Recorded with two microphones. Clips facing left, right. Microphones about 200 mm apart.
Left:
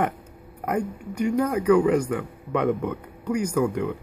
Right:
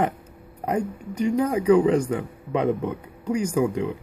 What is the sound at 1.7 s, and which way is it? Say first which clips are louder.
A man's voice: right 1 dB; 30° right (ahead or behind).